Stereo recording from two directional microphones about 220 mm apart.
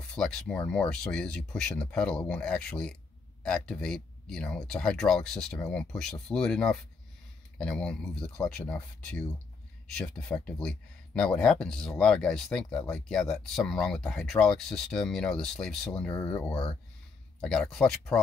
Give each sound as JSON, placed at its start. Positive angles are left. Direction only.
{"t": 0.1, "sound": "speech", "side_deg": 5}
{"t": 17.4, "sound": "speech", "side_deg": 0}